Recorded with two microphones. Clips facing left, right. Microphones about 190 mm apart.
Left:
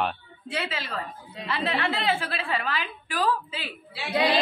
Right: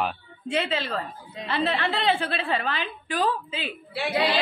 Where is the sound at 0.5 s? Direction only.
25° right (ahead or behind).